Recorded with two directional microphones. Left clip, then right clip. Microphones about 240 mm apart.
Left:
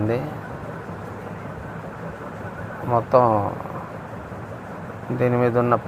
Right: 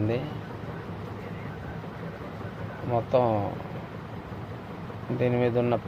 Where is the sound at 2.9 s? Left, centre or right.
Centre.